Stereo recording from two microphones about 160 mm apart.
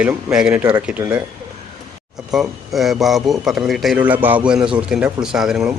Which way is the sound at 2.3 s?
Centre (ahead or behind).